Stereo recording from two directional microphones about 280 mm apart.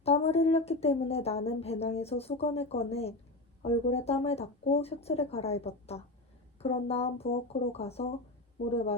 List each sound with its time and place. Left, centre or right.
0.0 s a woman's voice: left